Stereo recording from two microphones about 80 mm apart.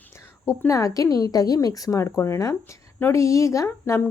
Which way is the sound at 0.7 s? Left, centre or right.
Left.